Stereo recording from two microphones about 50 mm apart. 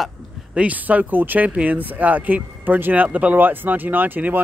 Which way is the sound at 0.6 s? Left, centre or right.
Right.